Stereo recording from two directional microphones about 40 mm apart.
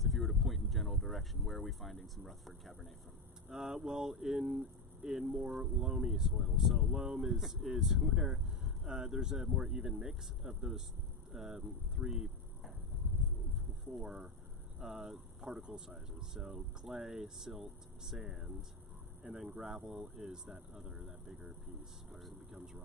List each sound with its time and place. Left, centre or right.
0.0 s speech: centre
3.5 s speech: centre
12.1 s a sound: centre
14.0 s speech: centre
22.1 s speech: centre